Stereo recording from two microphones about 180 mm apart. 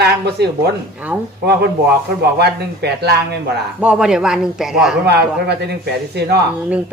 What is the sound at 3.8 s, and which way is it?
A man's voice, 5° right (ahead or behind).